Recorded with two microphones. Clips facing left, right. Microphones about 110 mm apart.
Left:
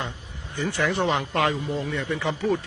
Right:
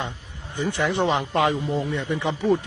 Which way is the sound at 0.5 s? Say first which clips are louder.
Right 1 dB; 20° right (ahead or behind).